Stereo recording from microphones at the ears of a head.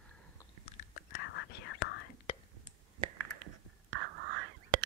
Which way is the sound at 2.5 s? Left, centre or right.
Right.